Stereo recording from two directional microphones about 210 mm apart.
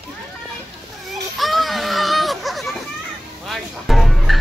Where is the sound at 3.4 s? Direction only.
Centre (ahead or behind).